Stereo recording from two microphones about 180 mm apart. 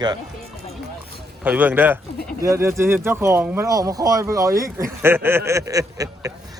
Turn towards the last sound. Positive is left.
turn(degrees=-20)  # may be behind; listen again after turning